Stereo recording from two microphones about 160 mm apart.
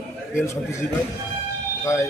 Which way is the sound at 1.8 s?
15° left (ahead or behind).